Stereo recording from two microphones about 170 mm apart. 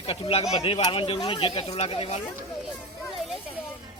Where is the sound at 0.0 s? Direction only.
35° left (ahead or behind).